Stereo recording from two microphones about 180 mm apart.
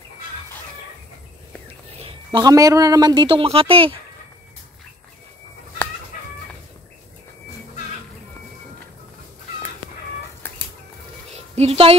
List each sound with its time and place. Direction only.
2.0 s a woman's voice: 30° right (ahead or behind)
11.3 s music: 35° right (ahead or behind)